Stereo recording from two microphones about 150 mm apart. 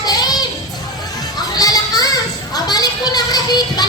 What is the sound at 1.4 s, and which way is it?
Children playing, 25° left (ahead or behind).